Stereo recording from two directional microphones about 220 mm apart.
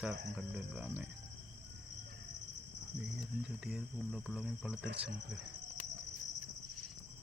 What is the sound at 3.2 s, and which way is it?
Speech, centre (ahead or behind).